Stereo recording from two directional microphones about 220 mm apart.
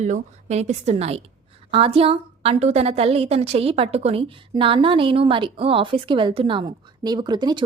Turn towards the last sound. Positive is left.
turn(degrees=-20)  # may be behind; listen again after turning